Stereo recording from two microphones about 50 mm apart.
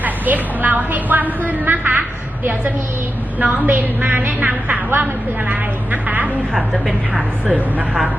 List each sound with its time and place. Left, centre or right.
0.0 s a woman's voice: right